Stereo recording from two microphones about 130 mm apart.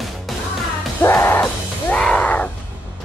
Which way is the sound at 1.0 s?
20° left (ahead or behind).